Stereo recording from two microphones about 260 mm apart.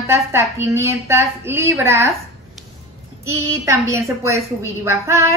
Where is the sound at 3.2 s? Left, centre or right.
Centre.